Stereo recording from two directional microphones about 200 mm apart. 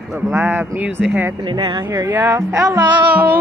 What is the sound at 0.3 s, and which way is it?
Speech, 5° right (ahead or behind).